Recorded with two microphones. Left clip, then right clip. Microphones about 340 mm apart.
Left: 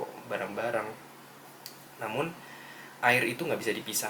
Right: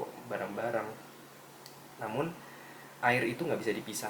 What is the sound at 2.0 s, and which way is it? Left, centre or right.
Speech, centre.